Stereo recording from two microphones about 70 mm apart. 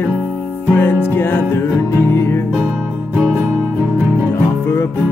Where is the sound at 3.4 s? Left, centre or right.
Right.